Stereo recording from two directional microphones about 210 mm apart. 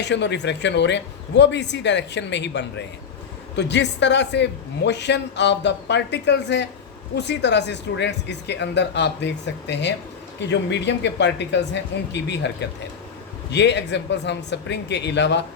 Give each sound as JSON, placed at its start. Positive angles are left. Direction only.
{"t": 0.0, "sound": "a man's voice", "side_deg": 55}